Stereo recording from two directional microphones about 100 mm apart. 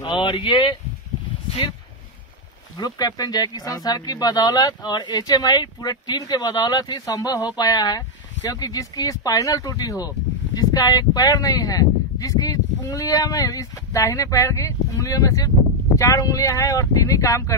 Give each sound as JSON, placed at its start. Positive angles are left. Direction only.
{"t": 0.0, "sound": "speech", "side_deg": 60}
{"t": 2.8, "sound": "speech", "side_deg": 40}